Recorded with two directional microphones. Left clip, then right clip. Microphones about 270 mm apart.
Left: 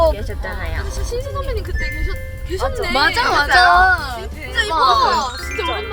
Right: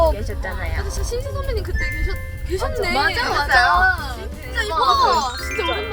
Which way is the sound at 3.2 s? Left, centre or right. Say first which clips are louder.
Left 5 dB; left.